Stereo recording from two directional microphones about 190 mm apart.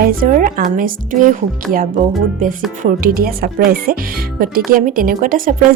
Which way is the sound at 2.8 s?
50° right (ahead or behind).